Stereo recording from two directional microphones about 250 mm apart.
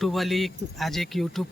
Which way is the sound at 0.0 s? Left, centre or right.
Centre.